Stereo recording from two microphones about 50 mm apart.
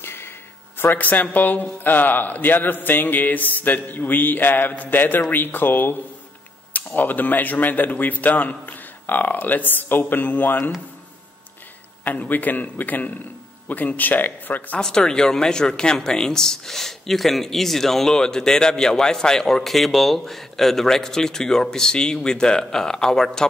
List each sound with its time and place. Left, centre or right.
0.0 s a sound: left
0.7 s a man's voice: left
12.0 s a man's voice: left
14.8 s speech: centre